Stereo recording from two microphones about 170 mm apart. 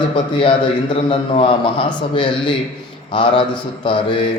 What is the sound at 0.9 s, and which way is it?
A man's voice, 35° left (ahead or behind).